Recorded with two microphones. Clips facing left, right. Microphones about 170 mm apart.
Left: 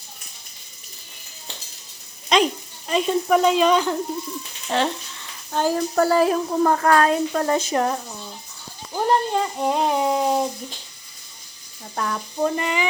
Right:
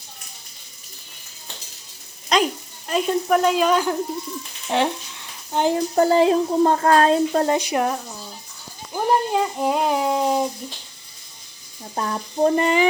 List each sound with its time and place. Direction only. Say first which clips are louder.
2.3 s a child's voice: left 1 dB; centre (ahead or behind); by 7.5 s 30° right (ahead or behind)
7.5 s speech: even; 15° right (ahead or behind)
9.0 s speech: right 1 dB; 5° right (ahead or behind)
11.9 s a sound: right 2 dB; 30° right (ahead or behind)